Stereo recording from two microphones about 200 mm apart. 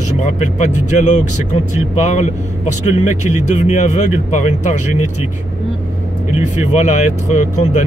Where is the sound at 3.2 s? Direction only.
35° left (ahead or behind).